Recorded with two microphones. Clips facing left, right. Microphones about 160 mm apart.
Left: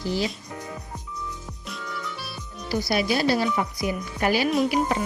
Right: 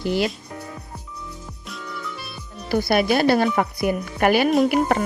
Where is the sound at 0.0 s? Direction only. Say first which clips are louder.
Right 4 dB; 65° right (ahead or behind).